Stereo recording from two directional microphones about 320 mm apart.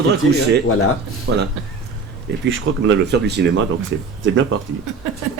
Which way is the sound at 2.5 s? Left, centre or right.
Right.